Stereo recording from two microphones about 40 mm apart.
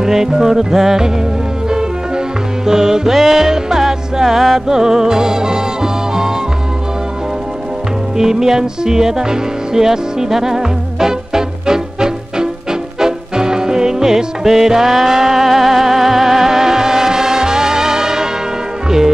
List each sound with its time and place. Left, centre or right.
0.0 s music: centre
8.2 s music: centre